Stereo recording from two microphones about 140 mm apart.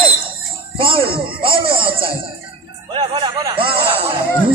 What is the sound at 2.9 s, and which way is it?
Music, 35° right (ahead or behind).